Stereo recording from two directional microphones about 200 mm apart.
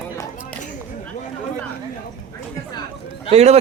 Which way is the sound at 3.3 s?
30° right (ahead or behind).